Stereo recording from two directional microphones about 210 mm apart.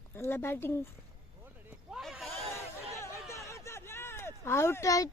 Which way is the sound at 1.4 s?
10° right (ahead or behind).